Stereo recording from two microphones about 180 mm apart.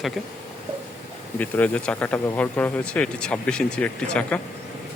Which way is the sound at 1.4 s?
10° left (ahead or behind).